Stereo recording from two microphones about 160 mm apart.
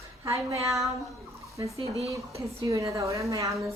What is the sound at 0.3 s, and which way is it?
A woman's voice, 20° right (ahead or behind).